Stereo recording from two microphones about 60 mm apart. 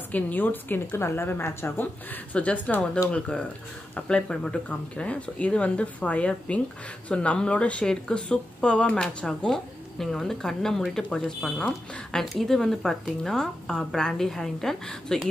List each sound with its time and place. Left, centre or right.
0.1 s speech: left
0.9 s a woman's voice: left
2.3 s speech: left